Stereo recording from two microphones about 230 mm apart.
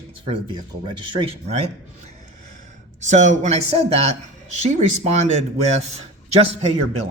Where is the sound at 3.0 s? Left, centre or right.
Right.